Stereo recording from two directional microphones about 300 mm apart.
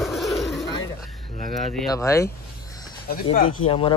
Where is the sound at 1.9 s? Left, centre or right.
Centre.